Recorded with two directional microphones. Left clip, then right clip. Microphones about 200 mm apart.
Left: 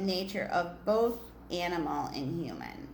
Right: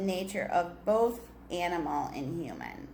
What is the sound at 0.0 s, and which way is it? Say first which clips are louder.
A woman's voice: right 1 dB; centre (ahead or behind).